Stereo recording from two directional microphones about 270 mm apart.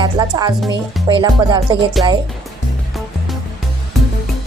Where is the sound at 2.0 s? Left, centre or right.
Centre.